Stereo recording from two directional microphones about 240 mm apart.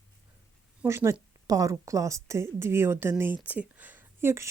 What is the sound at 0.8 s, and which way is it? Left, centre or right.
A woman's voice, centre.